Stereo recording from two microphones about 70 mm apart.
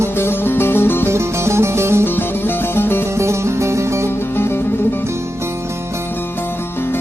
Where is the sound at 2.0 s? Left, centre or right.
Left.